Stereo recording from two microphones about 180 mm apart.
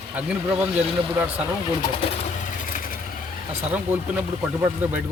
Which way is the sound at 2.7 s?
50° left (ahead or behind).